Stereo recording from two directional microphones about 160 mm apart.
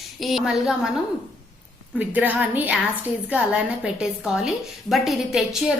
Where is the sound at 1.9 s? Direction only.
10° right (ahead or behind).